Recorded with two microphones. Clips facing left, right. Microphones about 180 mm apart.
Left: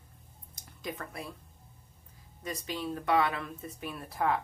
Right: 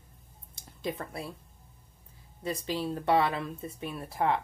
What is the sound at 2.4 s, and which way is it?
Speech, 30° right (ahead or behind).